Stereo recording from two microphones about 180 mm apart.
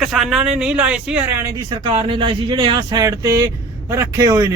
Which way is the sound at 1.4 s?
25° right (ahead or behind).